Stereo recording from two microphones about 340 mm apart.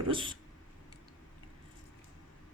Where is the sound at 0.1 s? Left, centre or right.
Centre.